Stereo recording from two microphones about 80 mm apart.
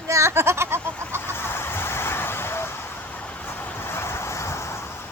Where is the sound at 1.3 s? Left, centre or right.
Left.